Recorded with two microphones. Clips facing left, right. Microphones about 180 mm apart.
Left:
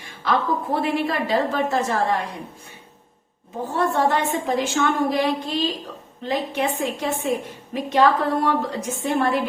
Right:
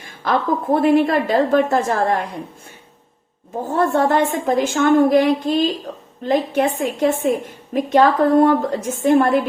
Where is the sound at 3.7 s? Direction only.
50° right (ahead or behind).